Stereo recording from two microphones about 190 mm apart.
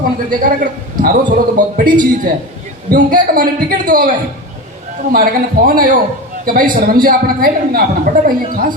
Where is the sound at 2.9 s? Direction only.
45° right (ahead or behind).